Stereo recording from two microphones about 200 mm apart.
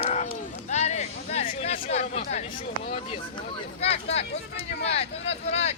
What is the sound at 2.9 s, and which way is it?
Speech, 30° left (ahead or behind).